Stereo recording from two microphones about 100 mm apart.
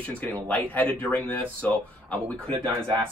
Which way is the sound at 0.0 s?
15° left (ahead or behind).